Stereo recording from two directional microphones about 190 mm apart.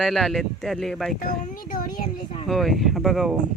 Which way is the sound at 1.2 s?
45° left (ahead or behind).